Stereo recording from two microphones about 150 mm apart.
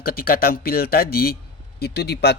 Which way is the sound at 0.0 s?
85° left.